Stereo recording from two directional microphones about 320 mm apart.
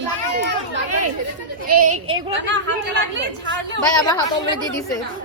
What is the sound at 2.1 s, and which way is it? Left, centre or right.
Speech, right.